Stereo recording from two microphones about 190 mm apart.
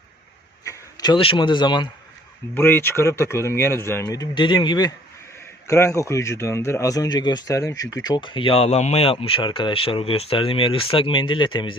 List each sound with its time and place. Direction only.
0.6 s speech: 20° left (ahead or behind)
2.6 s speech: 10° left (ahead or behind)